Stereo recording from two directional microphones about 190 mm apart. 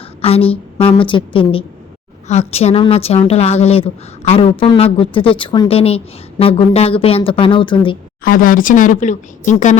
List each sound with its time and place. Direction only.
0.2 s a woman's voice: 30° left (ahead or behind)
8.2 s speech: 50° left (ahead or behind)